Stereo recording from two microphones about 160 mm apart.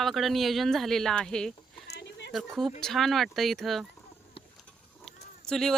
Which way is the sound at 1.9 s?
90° left.